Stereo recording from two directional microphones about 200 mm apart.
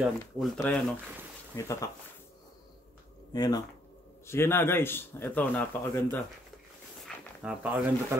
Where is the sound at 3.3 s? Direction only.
20° left (ahead or behind).